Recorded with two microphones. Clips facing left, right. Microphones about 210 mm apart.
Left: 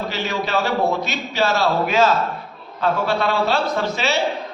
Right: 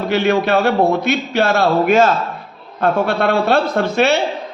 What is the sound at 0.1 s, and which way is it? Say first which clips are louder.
A man's voice: right 12 dB; 60° right (ahead or behind).